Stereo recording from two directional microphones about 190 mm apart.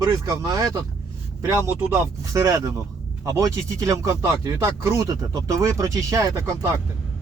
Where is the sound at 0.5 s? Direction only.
20° right (ahead or behind).